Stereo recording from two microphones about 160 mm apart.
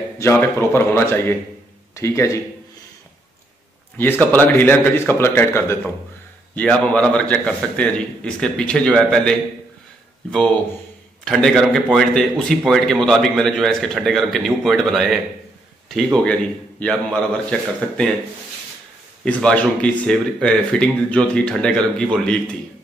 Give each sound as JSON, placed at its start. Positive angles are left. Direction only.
{"t": 0.2, "sound": "a man's voice", "side_deg": 15}
{"t": 4.0, "sound": "a man's voice", "side_deg": 10}
{"t": 11.2, "sound": "a man's voice", "side_deg": 0}
{"t": 19.2, "sound": "a man's voice", "side_deg": 5}